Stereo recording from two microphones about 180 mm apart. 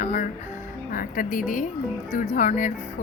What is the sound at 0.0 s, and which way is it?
Music, 40° left (ahead or behind).